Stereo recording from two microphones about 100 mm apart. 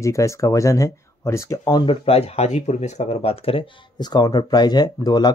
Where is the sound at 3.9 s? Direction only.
45° left (ahead or behind).